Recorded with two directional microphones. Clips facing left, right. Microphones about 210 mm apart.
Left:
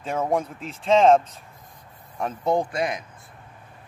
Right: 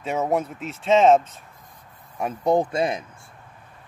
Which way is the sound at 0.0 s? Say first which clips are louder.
Right 1 dB; 5° right (ahead or behind).